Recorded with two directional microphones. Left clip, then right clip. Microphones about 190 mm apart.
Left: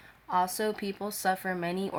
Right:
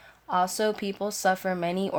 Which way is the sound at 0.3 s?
45° right (ahead or behind).